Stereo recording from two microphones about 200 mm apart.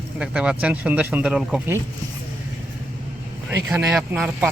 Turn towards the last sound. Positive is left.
turn(degrees=-10)  # may be behind; listen again after turning